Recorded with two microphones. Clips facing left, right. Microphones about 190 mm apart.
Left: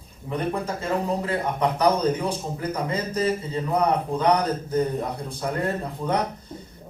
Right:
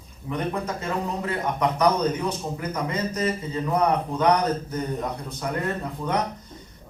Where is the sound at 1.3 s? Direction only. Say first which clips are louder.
Left 1 dB; 30° left (ahead or behind).